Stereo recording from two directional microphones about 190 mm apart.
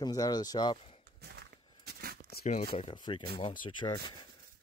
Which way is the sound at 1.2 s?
60° right (ahead or behind).